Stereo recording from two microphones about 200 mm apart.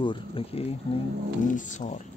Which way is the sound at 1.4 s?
40° left (ahead or behind).